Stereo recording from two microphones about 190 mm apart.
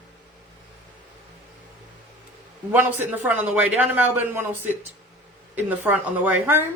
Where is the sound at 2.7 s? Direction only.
10° right (ahead or behind).